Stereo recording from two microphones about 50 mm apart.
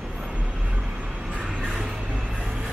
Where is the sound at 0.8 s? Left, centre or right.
Centre.